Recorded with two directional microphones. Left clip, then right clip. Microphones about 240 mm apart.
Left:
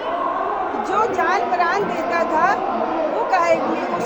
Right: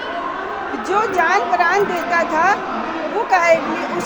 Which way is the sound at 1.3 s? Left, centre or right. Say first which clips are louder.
Right 3 dB; centre.